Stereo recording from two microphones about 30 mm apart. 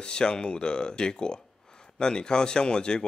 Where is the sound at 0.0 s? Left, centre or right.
Left.